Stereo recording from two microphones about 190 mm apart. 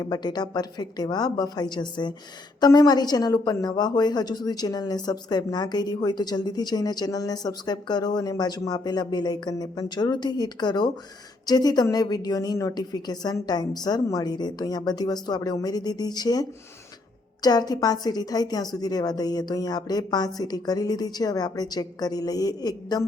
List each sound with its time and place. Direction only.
0.0 s speech: 20° left (ahead or behind)